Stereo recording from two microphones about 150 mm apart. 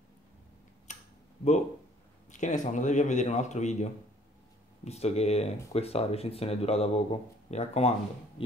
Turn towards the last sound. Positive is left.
turn(degrees=45)  # may be behind; listen again after turning